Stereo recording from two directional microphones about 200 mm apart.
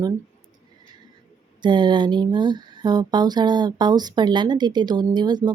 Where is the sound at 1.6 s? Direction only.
20° right (ahead or behind).